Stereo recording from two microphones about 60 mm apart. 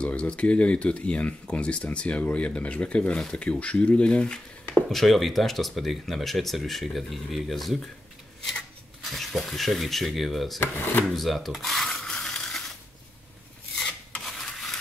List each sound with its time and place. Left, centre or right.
0.0 s speech: centre
4.8 s speech: centre
9.0 s speech: centre
10.6 s speech: left
11.1 s a sound: centre
13.7 s filing: centre
14.2 s rub: centre